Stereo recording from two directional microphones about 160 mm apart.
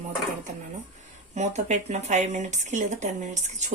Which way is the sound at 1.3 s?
45° right (ahead or behind).